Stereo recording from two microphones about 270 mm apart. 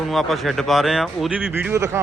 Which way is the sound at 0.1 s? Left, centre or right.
Centre.